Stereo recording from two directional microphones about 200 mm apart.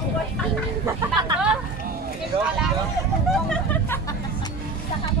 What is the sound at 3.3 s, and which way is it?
Hubbub, 5° left (ahead or behind).